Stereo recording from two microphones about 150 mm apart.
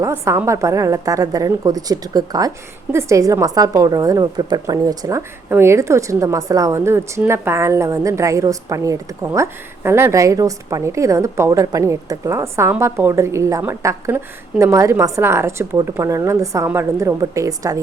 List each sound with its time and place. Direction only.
0.0 s a woman's voice: 15° right (ahead or behind)